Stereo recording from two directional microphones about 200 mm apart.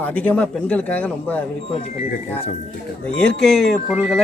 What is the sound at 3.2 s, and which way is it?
Speech, 5° left (ahead or behind).